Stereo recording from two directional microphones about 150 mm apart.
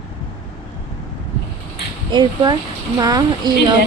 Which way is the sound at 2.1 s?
30° right (ahead or behind).